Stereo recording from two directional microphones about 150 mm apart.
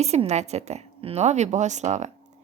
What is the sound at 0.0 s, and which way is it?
A woman's voice, 45° right (ahead or behind).